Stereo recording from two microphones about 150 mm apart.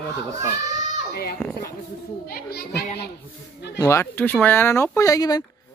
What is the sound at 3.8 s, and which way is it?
Speech, 20° left (ahead or behind).